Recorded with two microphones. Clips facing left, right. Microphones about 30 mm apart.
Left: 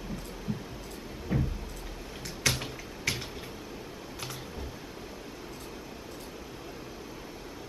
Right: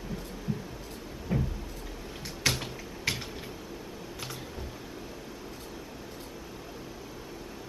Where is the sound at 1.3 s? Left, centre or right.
Centre.